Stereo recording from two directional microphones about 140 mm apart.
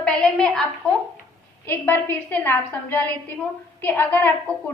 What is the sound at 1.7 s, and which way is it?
A woman's voice, 15° left (ahead or behind).